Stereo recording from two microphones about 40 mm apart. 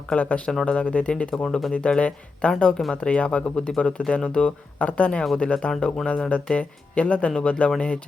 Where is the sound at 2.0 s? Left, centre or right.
Left.